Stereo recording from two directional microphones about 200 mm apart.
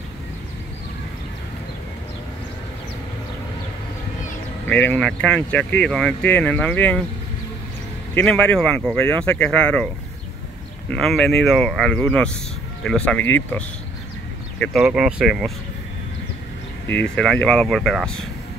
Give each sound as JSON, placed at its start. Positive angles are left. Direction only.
{"t": 4.6, "sound": "speech", "side_deg": 10}
{"t": 8.1, "sound": "speech", "side_deg": 5}
{"t": 10.9, "sound": "speech", "side_deg": 0}
{"t": 14.6, "sound": "speech", "side_deg": 0}
{"t": 17.1, "sound": "speech", "side_deg": 5}